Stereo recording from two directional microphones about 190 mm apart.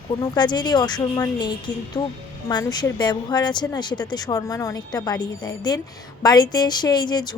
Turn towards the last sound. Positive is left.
turn(degrees=20)  # may be behind; listen again after turning